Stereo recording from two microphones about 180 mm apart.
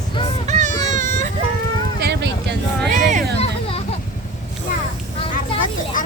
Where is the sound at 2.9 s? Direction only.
40° right (ahead or behind).